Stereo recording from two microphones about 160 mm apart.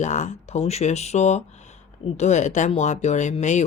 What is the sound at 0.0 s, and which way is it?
Speech, 50° left (ahead or behind).